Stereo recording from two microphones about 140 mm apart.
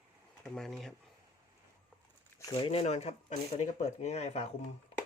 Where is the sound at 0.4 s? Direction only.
5° left (ahead or behind).